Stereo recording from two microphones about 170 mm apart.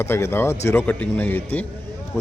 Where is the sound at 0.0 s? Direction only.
15° left (ahead or behind).